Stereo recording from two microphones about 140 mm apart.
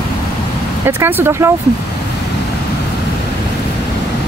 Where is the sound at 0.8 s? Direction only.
15° right (ahead or behind).